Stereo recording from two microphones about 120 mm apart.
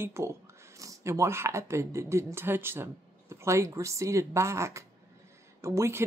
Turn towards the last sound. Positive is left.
turn(degrees=-25)  # may be behind; listen again after turning